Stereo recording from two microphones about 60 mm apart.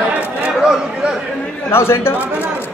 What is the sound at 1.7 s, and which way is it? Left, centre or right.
Speech, left.